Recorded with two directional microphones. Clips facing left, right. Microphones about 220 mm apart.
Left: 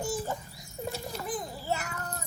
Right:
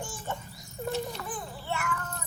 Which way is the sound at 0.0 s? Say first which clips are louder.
Left 5 dB; 35° left (ahead or behind).